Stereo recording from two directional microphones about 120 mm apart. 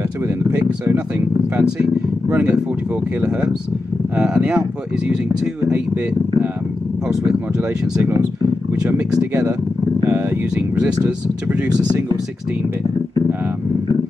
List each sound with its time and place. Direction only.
0.5 s speech: 15° right (ahead or behind)
3.2 s speech: 10° right (ahead or behind)
8.0 s speech: 30° right (ahead or behind)
10.0 s speech: 20° right (ahead or behind)